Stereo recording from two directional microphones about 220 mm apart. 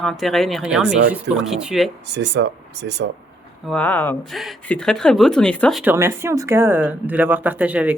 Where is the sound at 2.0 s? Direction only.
50° right (ahead or behind).